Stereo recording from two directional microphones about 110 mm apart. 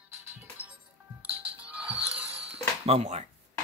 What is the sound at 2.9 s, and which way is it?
Speech, 70° right (ahead or behind).